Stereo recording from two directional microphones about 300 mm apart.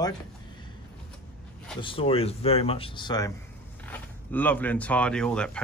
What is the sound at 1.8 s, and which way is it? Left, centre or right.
Speech, centre.